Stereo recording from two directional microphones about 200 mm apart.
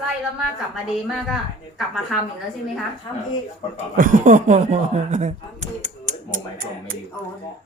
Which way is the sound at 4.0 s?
40° right (ahead or behind).